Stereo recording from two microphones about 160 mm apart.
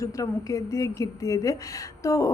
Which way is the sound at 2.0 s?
20° left (ahead or behind).